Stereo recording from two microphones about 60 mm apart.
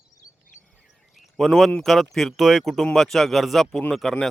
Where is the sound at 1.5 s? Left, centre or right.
Centre.